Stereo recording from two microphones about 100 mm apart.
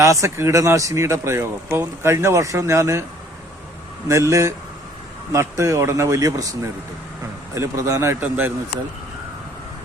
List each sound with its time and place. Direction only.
0.0 s speech: 30° right (ahead or behind)
4.1 s speech: 30° right (ahead or behind)
8.2 s speech: 20° right (ahead or behind)